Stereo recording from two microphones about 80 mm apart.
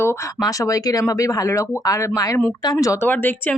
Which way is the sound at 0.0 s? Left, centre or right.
Left.